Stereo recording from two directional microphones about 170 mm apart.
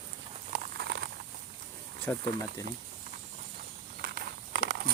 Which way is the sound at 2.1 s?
10° left (ahead or behind).